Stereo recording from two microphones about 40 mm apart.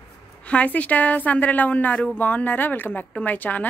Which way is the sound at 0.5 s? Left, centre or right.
Left.